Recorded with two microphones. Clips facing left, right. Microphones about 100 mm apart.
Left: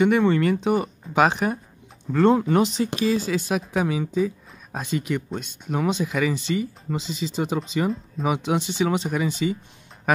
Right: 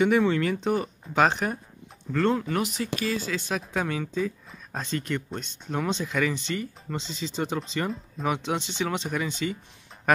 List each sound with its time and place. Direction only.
0.0 s speech: centre (ahead or behind)
2.1 s speech: 20° left (ahead or behind)
10.1 s a sound: 5° left (ahead or behind)